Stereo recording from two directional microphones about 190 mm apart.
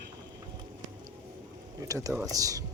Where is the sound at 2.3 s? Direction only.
20° right (ahead or behind).